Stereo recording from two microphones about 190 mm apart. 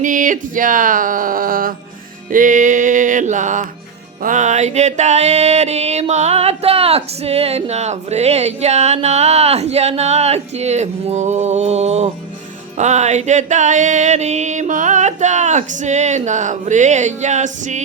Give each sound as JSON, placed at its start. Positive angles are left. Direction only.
{"t": 0.0, "sound": "speech", "side_deg": -45}
{"t": 2.3, "sound": "music", "side_deg": -45}